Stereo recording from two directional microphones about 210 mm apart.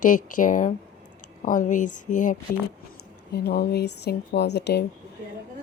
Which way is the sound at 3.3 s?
50° left (ahead or behind).